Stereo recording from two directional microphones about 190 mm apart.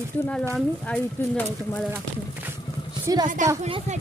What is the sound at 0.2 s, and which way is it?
A woman's voice, 5° left (ahead or behind).